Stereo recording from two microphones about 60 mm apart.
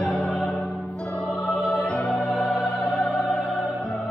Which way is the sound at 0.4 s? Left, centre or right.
Left.